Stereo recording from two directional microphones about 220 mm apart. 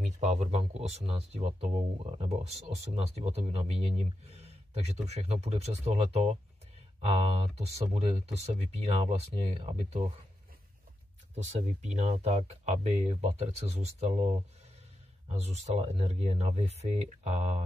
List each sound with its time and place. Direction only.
0.0 s speech: 30° right (ahead or behind)
11.3 s speech: 30° right (ahead or behind)
15.2 s speech: 30° right (ahead or behind)